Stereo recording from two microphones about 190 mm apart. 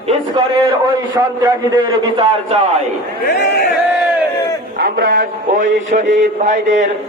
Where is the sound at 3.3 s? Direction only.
60° left (ahead or behind).